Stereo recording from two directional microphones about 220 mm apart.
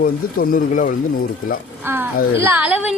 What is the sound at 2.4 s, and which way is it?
Speech, 10° right (ahead or behind).